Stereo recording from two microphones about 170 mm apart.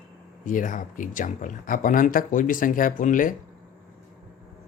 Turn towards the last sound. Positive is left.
turn(degrees=50)  # may be behind; listen again after turning